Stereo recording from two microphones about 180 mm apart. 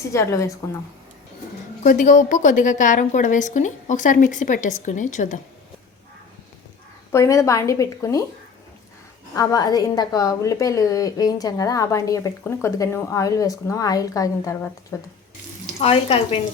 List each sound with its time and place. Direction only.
0.0 s a woman's voice: 15° left (ahead or behind)
1.8 s a woman's voice: 45° left (ahead or behind)
7.1 s a woman's voice: 15° left (ahead or behind)
9.3 s a woman's voice: 20° left (ahead or behind)
15.8 s speech: 30° left (ahead or behind)